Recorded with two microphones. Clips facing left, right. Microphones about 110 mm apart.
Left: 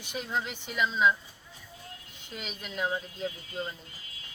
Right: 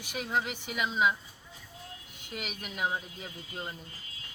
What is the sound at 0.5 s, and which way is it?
Speech, 10° right (ahead or behind).